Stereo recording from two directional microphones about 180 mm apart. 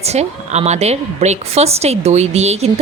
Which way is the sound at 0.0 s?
35° right (ahead or behind).